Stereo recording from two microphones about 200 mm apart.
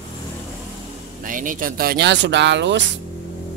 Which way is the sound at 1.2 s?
40° right (ahead or behind).